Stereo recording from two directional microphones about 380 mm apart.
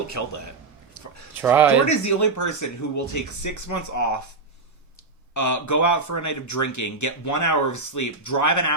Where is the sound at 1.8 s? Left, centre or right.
Left.